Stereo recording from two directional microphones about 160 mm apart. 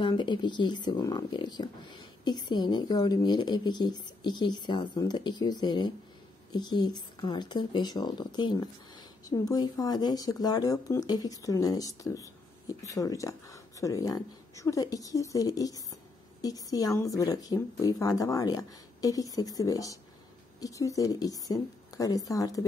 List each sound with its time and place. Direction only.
0.0 s speech: 30° left (ahead or behind)